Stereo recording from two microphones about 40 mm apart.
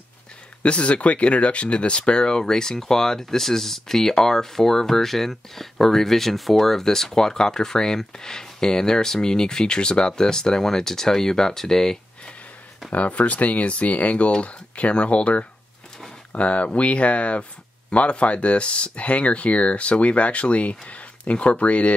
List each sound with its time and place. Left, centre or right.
0.6 s speech: left; by 12.0 s centre
12.9 s speech: left